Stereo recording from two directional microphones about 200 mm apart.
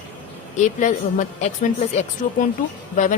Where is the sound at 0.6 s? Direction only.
40° left (ahead or behind).